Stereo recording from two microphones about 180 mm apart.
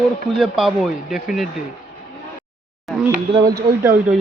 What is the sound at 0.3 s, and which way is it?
Speech, centre (ahead or behind).